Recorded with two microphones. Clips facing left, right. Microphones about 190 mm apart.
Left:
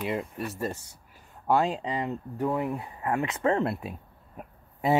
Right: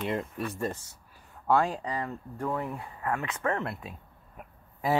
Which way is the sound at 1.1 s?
20° left (ahead or behind).